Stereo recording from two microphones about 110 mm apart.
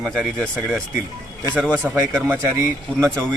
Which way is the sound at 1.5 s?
10° left (ahead or behind).